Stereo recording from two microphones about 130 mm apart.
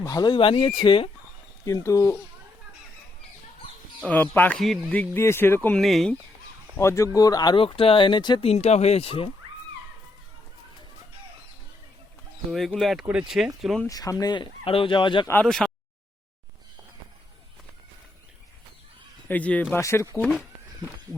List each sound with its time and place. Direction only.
0.0 s speech: 30° left (ahead or behind)
1.6 s speech: 25° left (ahead or behind)
4.0 s speech: 15° left (ahead or behind)
4.5 s speech: centre (ahead or behind)
4.9 s speech: 15° left (ahead or behind)
5.8 s speech: centre (ahead or behind)
6.7 s speech: 20° left (ahead or behind)
8.4 s speech: 55° left (ahead or behind)
12.5 s speech: centre (ahead or behind)
13.8 s speech: 25° left (ahead or behind)
14.6 s speech: 45° left (ahead or behind)
15.4 s speech: centre (ahead or behind)
19.3 s speech: 10° left (ahead or behind)